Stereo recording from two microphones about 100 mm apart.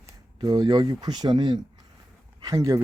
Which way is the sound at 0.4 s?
45° right (ahead or behind).